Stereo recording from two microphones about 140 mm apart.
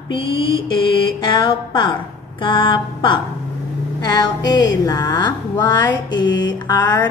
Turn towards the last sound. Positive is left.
turn(degrees=30)  # may be behind; listen again after turning